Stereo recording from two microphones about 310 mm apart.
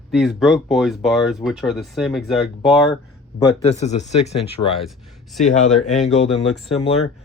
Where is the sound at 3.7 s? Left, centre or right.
Left.